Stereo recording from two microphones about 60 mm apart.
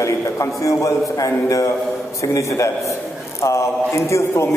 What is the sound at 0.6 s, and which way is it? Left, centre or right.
A man's voice, left.